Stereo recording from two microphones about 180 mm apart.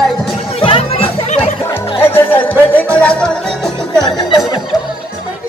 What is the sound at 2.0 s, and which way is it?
Music, 10° left (ahead or behind).